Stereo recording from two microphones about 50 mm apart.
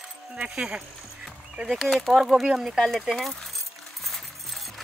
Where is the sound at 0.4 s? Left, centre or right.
Centre.